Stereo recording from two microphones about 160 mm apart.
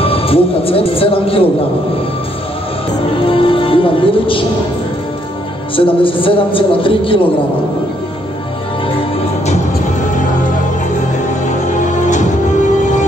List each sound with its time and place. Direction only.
0.0 s speech: 35° left (ahead or behind)
3.3 s speech: 35° left (ahead or behind)
5.8 s a man's voice: 35° left (ahead or behind)
11.4 s music: 50° left (ahead or behind)